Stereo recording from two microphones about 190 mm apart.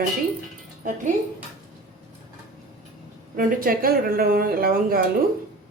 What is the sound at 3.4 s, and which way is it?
A woman's voice, 50° right (ahead or behind).